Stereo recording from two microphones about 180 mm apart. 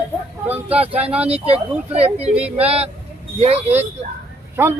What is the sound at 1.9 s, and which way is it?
Speech, 35° right (ahead or behind).